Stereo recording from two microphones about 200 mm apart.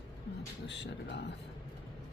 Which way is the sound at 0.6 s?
60° left (ahead or behind).